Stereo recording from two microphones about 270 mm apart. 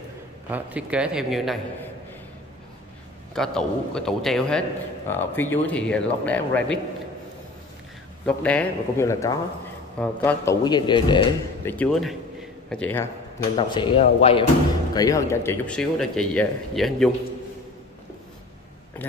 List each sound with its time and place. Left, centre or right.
0.5 s a man's voice: centre
3.3 s a man's voice: centre
8.3 s a man's voice: centre
11.7 s a man's voice: centre
13.6 s a man's voice: centre